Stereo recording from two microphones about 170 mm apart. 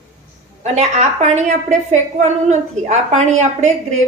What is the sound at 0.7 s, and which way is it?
A woman's voice, 40° right (ahead or behind).